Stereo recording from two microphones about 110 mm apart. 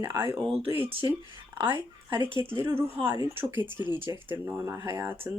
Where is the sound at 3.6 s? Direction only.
45° left (ahead or behind).